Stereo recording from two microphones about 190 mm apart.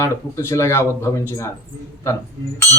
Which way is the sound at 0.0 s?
15° left (ahead or behind).